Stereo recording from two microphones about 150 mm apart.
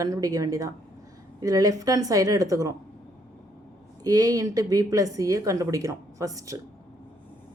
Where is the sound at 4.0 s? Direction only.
25° right (ahead or behind).